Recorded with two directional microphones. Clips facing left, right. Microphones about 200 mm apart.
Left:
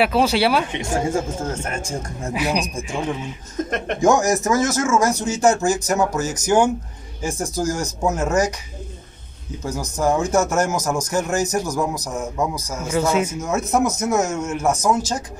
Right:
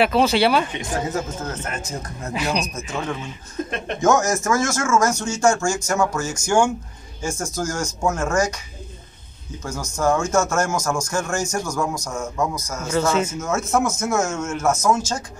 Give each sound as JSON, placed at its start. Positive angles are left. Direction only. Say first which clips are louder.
{"t": 0.0, "sound": "speech", "louder": "even", "side_deg": 5}
{"t": 0.7, "sound": "a man's voice", "louder": "left 3 dB", "side_deg": 25}
{"t": 2.3, "sound": "a man's voice", "louder": "left 2 dB", "side_deg": 10}
{"t": 9.9, "sound": "a man's voice", "louder": "left 1 dB", "side_deg": 20}
{"t": 15.0, "sound": "speech", "louder": "left 2 dB", "side_deg": 35}